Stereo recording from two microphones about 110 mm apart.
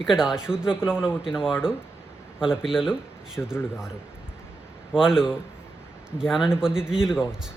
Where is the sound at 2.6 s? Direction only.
5° right (ahead or behind).